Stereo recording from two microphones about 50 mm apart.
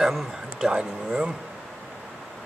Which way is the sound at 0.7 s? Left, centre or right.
Centre.